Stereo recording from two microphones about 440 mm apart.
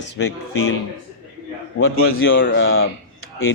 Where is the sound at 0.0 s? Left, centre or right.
Left.